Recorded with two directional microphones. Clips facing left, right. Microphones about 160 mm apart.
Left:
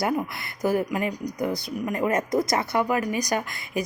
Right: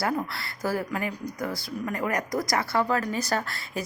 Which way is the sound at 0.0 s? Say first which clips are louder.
Left 2 dB; 20° left (ahead or behind).